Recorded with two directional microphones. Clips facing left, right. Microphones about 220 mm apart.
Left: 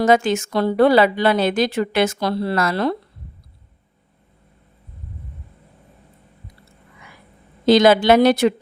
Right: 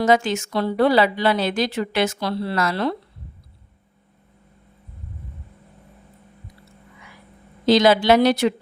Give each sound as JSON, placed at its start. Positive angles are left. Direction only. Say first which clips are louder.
{"t": 0.0, "sound": "a woman's voice", "louder": "left 2 dB", "side_deg": 50}
{"t": 7.6, "sound": "a woman's voice", "louder": "left 3 dB", "side_deg": 50}